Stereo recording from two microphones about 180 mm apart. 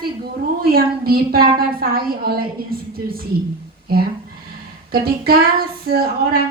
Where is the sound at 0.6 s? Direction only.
55° right (ahead or behind).